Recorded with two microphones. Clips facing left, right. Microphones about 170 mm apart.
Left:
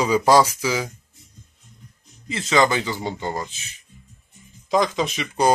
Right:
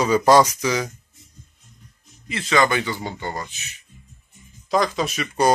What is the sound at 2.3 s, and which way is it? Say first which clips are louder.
Speech: left 1 dB; 20° left (ahead or behind).